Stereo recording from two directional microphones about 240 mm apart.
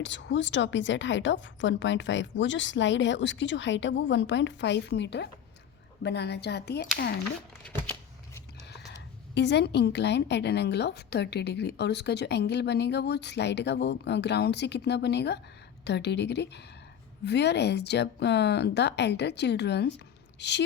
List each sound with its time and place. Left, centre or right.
0.0 s a woman's voice: left
8.9 s a woman's voice: left